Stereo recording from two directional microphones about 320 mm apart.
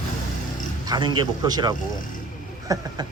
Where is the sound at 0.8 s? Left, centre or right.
Centre.